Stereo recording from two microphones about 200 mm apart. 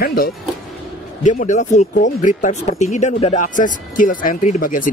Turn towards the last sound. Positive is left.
turn(degrees=45)  # may be behind; listen again after turning